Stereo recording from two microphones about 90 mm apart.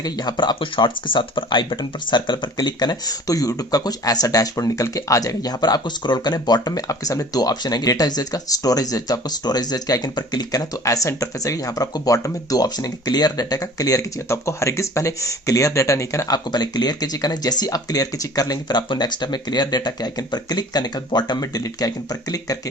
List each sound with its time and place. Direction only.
0.0 s speech: 50° left (ahead or behind)